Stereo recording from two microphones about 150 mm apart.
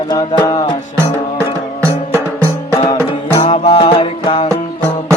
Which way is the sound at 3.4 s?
45° left (ahead or behind).